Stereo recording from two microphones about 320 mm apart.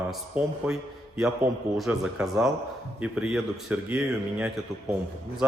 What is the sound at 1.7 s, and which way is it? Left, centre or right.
A man's voice, centre.